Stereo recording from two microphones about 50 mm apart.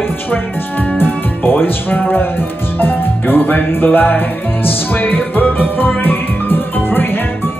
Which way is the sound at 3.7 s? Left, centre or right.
Left.